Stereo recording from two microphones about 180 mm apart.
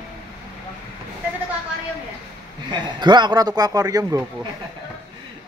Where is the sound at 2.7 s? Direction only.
25° right (ahead or behind).